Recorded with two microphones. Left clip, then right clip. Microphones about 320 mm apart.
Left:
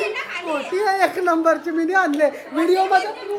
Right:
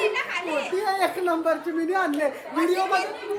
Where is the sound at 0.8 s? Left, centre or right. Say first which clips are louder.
Left 8 dB; left.